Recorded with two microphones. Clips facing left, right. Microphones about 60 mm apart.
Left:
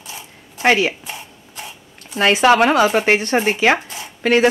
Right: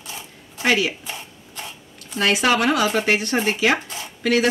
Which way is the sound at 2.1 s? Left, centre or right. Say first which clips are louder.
Left 6 dB; left.